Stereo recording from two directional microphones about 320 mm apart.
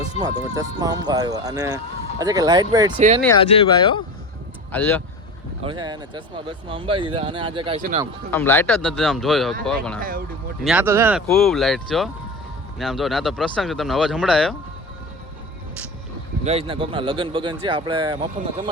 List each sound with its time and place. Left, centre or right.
0.2 s speech: centre
3.5 s speech: centre
4.7 s speech: centre
5.6 s speech: centre
8.3 s speech: centre
10.0 s speech: right
10.6 s speech: centre
16.4 s speech: centre